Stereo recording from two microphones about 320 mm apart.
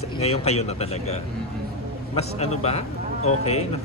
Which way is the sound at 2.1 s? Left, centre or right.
Centre.